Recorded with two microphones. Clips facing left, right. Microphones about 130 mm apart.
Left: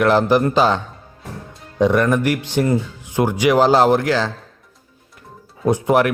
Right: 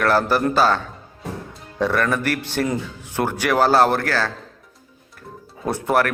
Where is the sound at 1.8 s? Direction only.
15° left (ahead or behind).